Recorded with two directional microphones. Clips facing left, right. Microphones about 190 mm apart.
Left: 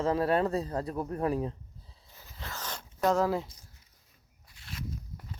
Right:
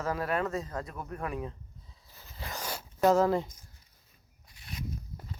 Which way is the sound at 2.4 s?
10° right (ahead or behind).